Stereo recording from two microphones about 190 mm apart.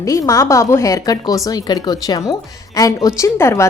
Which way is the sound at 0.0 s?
15° left (ahead or behind).